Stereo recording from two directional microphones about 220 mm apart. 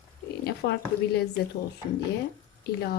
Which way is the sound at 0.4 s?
50° left (ahead or behind).